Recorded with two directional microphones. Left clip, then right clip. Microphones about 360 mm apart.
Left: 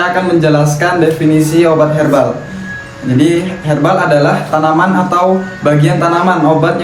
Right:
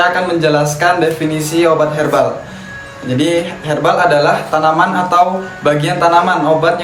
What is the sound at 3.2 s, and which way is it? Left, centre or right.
Speech, centre.